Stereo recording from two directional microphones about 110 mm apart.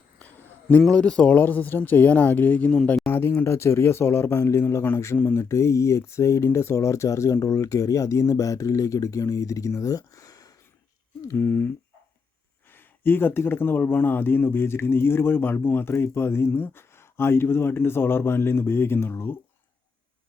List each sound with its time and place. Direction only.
0.2 s a sound: 15° left (ahead or behind)
0.8 s speech: 5° left (ahead or behind)
3.1 s speech: 20° left (ahead or behind)
12.7 s speech: 20° left (ahead or behind)